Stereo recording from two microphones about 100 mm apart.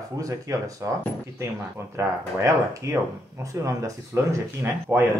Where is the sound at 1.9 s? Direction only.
30° right (ahead or behind).